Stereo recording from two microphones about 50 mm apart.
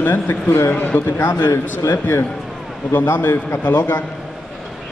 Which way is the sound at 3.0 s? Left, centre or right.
Left.